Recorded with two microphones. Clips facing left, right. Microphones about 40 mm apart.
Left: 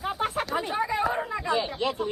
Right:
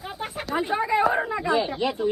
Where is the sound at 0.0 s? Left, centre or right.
Centre.